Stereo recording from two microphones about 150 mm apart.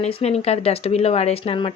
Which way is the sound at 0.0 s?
45° left (ahead or behind).